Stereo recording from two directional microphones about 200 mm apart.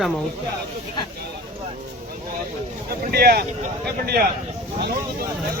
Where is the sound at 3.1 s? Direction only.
50° right (ahead or behind).